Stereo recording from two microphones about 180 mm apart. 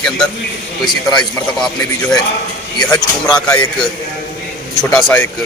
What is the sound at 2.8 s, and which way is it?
Speech, 20° left (ahead or behind).